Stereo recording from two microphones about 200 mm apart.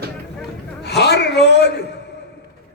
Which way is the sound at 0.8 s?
55° left (ahead or behind).